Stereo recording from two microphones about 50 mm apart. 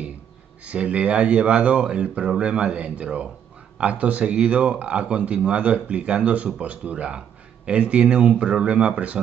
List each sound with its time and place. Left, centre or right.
0.7 s speech: right